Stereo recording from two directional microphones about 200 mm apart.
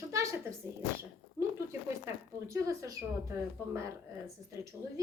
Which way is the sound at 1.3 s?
15° right (ahead or behind).